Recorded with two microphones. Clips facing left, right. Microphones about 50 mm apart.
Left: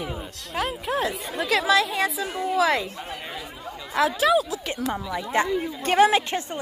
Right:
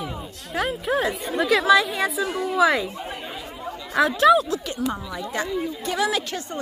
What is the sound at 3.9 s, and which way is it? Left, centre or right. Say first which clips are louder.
Speech: right 4 dB; centre.